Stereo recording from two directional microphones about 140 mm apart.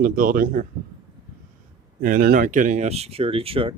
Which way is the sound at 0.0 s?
80° right.